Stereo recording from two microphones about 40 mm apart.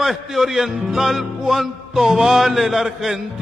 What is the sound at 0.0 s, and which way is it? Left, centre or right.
Music, centre.